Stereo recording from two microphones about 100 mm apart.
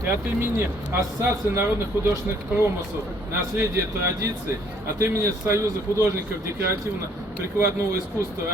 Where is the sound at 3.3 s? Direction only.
25° right (ahead or behind).